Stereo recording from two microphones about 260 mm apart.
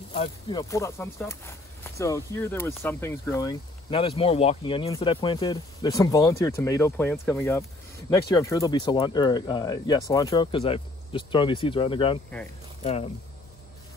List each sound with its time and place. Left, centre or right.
0.1 s speech: centre